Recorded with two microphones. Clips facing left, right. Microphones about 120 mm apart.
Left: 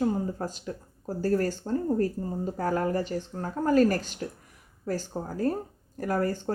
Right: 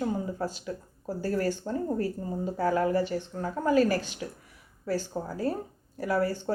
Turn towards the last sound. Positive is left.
turn(degrees=45)  # may be behind; listen again after turning